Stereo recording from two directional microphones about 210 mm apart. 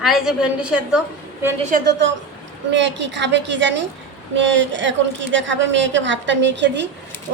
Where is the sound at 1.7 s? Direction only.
55° right (ahead or behind).